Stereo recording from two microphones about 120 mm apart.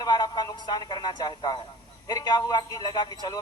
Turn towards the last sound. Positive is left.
turn(degrees=35)  # may be behind; listen again after turning